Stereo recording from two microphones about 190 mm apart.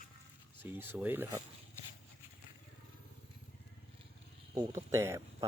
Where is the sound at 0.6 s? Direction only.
10° right (ahead or behind).